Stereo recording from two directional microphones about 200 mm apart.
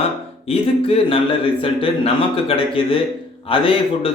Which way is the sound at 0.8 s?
30° left (ahead or behind).